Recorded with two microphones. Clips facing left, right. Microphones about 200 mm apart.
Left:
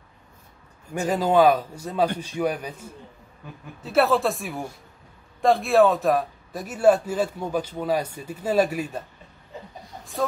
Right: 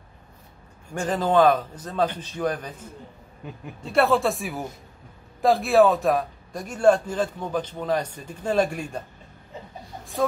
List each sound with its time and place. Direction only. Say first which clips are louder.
0.9 s a man's voice: left 1 dB; 10° left (ahead or behind)
10.2 s speech: right 2 dB; centre (ahead or behind)